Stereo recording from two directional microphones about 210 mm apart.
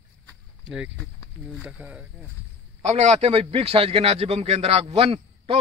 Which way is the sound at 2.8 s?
30° right (ahead or behind).